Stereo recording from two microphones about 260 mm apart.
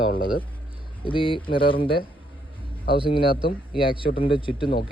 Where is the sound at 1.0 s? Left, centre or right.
Centre.